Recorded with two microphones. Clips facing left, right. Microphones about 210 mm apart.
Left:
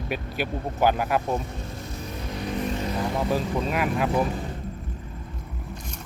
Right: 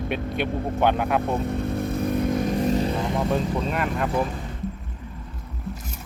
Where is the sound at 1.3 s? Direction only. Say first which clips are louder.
Right 5 dB; 60° right (ahead or behind).